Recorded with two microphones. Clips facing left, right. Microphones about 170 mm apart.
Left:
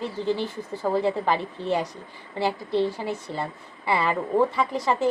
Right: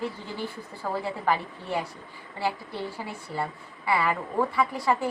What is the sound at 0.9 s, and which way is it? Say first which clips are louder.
Speech: left 4 dB; 20° left (ahead or behind).